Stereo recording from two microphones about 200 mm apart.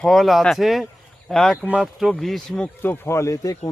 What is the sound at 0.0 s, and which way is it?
Speech, centre (ahead or behind).